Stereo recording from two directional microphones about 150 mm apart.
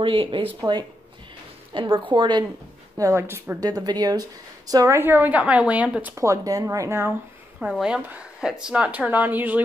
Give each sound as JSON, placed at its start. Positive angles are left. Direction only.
{"t": 0.0, "sound": "a woman's voice", "side_deg": -35}
{"t": 3.0, "sound": "speech", "side_deg": -20}
{"t": 7.7, "sound": "speech", "side_deg": -5}